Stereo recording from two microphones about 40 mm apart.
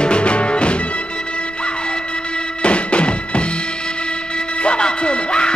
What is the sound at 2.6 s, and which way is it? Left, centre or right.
Music, left.